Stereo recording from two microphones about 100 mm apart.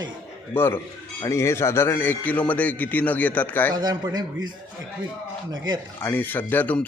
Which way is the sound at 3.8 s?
45° right (ahead or behind).